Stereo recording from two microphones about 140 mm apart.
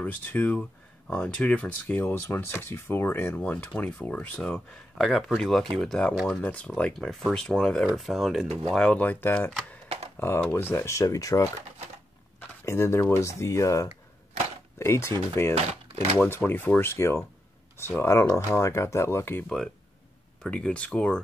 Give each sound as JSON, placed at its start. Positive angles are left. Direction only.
{"t": 0.0, "sound": "speech", "side_deg": 10}
{"t": 15.5, "sound": "speech", "side_deg": -50}
{"t": 16.2, "sound": "speech", "side_deg": 15}
{"t": 20.4, "sound": "speech", "side_deg": 10}